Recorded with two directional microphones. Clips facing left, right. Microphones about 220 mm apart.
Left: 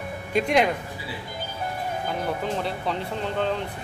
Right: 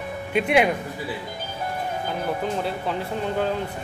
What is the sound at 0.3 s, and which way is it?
Speech, 5° right (ahead or behind).